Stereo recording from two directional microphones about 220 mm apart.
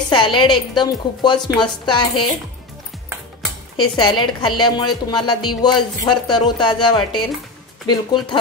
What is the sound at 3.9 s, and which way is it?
A woman's voice, 20° left (ahead or behind).